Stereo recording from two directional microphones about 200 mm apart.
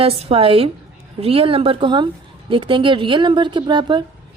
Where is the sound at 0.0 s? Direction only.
30° right (ahead or behind).